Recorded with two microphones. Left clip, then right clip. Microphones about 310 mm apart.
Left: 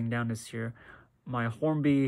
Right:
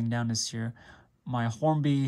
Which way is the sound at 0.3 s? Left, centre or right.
Right.